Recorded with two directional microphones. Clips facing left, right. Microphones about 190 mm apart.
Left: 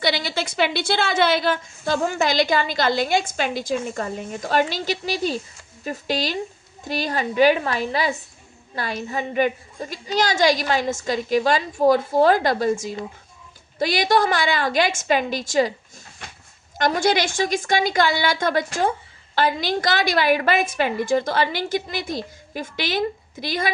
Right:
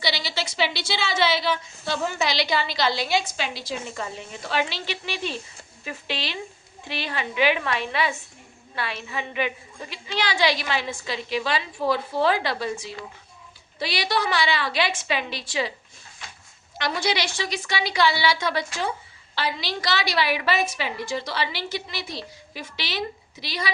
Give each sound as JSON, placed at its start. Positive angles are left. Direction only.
{"t": 0.0, "sound": "a woman's voice", "side_deg": 55}
{"t": 16.7, "sound": "a woman's voice", "side_deg": 45}